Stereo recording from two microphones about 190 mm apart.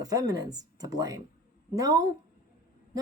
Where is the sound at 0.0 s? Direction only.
20° right (ahead or behind).